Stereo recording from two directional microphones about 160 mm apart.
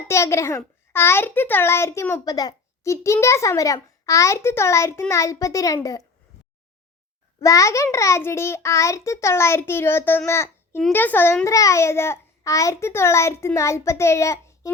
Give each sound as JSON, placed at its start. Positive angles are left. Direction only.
{"t": 0.1, "sound": "a child's voice", "side_deg": 20}
{"t": 7.4, "sound": "a child's voice", "side_deg": 20}